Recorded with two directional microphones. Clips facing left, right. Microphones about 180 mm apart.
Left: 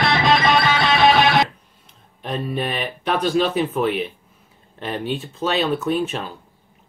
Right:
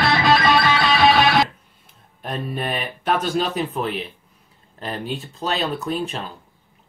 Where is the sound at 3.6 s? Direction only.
Centre (ahead or behind).